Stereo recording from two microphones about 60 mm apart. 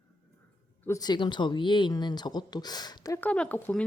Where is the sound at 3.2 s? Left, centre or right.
Left.